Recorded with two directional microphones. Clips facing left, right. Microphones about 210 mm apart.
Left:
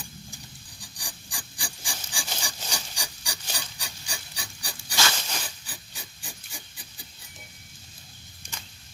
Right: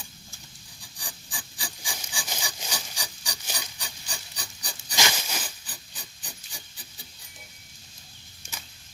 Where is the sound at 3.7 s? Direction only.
10° left (ahead or behind).